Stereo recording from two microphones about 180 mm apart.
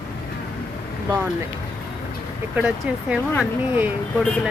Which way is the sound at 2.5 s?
5° right (ahead or behind).